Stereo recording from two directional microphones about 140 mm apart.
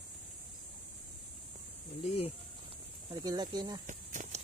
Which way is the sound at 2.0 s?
45° left (ahead or behind).